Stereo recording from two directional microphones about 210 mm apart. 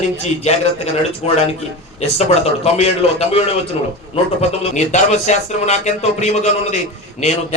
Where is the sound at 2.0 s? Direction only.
30° left (ahead or behind).